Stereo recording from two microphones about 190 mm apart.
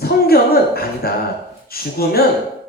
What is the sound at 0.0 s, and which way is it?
Speech, 55° left (ahead or behind).